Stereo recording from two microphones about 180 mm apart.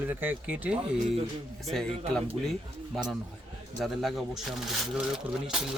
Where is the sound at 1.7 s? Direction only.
5° left (ahead or behind).